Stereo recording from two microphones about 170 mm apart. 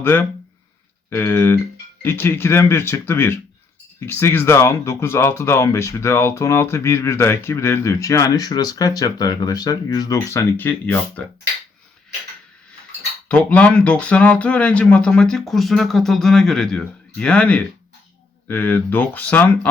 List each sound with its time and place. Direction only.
0.0 s speech: 10° left (ahead or behind)
13.2 s speech: 5° left (ahead or behind)